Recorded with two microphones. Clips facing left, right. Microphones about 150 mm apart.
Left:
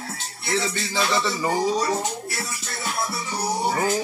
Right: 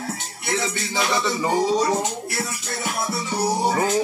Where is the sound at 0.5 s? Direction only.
15° right (ahead or behind).